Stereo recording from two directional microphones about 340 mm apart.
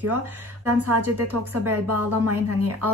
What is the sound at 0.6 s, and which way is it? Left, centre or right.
Speech, right.